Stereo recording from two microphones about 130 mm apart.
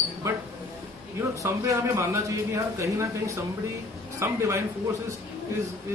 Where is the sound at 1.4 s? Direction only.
25° right (ahead or behind).